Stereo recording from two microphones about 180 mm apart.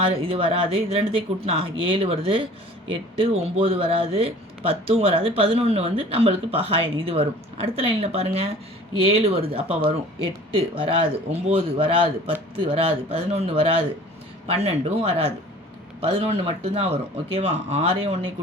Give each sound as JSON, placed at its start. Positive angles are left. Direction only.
{"t": 0.0, "sound": "speech", "side_deg": -30}